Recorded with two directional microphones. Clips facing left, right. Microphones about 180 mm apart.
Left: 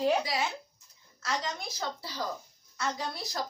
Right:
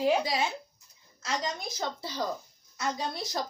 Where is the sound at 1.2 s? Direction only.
20° right (ahead or behind).